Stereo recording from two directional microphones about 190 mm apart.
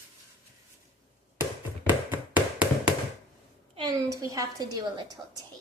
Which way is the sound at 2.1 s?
5° right (ahead or behind).